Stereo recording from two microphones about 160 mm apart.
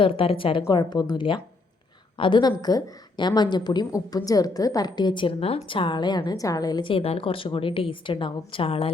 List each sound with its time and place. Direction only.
0.0 s a woman's voice: 35° left (ahead or behind)